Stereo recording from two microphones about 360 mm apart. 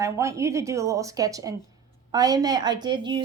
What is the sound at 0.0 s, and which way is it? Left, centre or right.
A woman's voice, centre.